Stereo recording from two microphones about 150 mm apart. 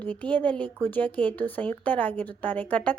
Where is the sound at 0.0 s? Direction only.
10° left (ahead or behind).